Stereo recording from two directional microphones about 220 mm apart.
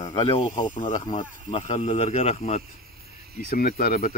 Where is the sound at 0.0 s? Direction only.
25° left (ahead or behind).